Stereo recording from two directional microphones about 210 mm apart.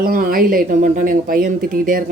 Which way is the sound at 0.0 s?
45° right (ahead or behind).